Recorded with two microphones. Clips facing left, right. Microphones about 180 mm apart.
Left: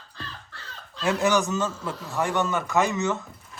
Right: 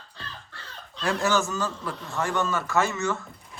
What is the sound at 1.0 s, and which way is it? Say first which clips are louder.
Speech: left 2 dB; 20° left (ahead or behind).